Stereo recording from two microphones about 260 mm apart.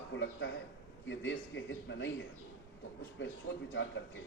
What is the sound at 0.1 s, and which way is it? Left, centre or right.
A man's voice, left.